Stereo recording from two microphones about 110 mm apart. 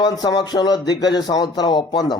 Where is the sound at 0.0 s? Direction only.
35° left (ahead or behind).